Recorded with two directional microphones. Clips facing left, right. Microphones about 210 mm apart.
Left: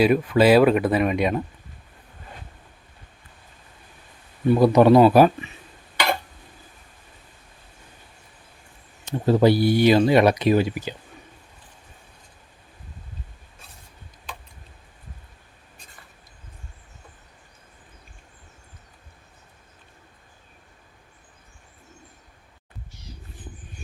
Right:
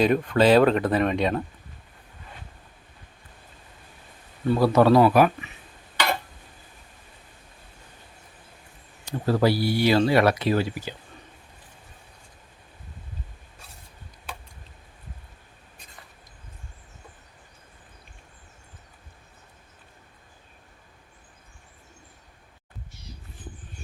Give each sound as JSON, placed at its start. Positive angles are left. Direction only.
{"t": 0.0, "sound": "speech", "side_deg": 5}
{"t": 4.4, "sound": "speech", "side_deg": 15}
{"t": 9.0, "sound": "speech", "side_deg": 20}